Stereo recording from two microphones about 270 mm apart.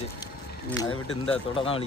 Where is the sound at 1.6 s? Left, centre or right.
Left.